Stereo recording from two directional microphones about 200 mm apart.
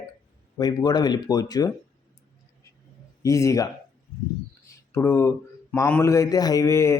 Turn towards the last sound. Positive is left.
turn(degrees=15)  # may be behind; listen again after turning